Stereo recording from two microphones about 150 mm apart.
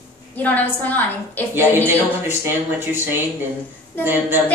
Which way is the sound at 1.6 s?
15° right (ahead or behind).